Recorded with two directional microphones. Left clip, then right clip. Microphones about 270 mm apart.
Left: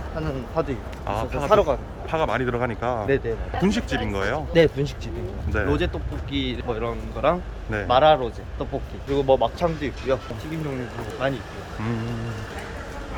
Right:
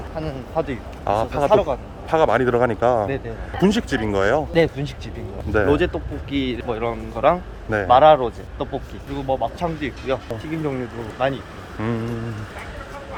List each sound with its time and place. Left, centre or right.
0.6 s speech: centre
1.0 s speech: centre
1.5 s speech: centre
2.0 s speech: right
4.5 s speech: centre
5.5 s speech: centre
9.1 s speech: centre
11.2 s speech: centre